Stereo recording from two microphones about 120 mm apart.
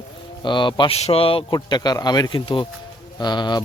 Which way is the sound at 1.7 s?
35° left (ahead or behind).